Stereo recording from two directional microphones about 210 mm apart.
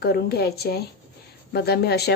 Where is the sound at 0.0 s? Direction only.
50° left (ahead or behind).